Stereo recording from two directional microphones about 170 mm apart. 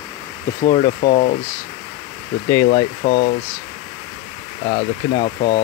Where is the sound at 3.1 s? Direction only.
60° left (ahead or behind).